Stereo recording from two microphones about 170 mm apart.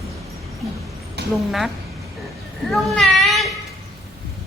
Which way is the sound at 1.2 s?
75° right (ahead or behind).